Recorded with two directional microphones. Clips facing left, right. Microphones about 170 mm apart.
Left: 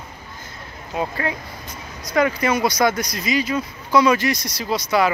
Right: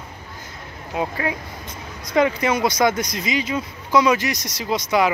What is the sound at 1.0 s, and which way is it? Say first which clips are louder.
Speech: even; 10° right (ahead or behind).